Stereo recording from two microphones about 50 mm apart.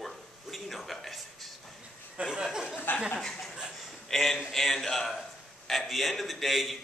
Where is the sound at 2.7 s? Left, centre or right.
Left.